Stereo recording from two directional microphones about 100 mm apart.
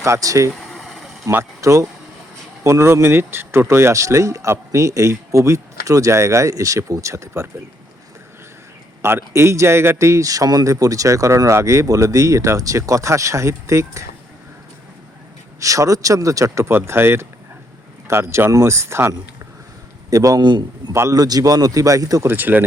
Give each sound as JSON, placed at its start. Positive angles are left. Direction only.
{"t": 0.0, "sound": "speech", "side_deg": -35}
{"t": 0.5, "sound": "vehicle", "side_deg": 0}
{"t": 1.3, "sound": "speech", "side_deg": -25}
{"t": 9.0, "sound": "speech", "side_deg": -25}
{"t": 15.6, "sound": "a man's voice", "side_deg": -35}
{"t": 20.4, "sound": "a man's voice", "side_deg": -50}
{"t": 20.9, "sound": "speech", "side_deg": -25}
{"t": 21.2, "sound": "speech", "side_deg": -40}
{"t": 22.3, "sound": "speech", "side_deg": -20}